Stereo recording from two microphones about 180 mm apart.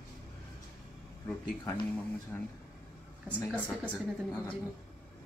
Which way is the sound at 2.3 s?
10° left (ahead or behind).